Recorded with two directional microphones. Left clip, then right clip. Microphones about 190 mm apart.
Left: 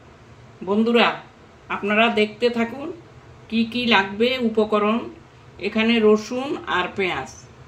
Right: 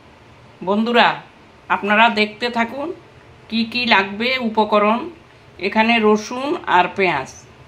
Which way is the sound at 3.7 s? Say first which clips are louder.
Right 3 dB; 10° right (ahead or behind).